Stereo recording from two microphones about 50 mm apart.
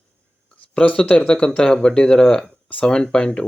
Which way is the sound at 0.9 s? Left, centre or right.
Centre.